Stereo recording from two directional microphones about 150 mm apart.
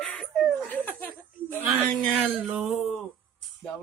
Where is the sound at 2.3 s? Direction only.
5° right (ahead or behind).